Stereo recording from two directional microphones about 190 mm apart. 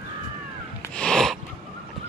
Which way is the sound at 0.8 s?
5° left (ahead or behind).